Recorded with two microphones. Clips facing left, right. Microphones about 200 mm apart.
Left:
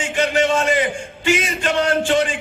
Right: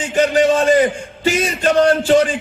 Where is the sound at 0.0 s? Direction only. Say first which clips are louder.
Right 4 dB; 40° right (ahead or behind).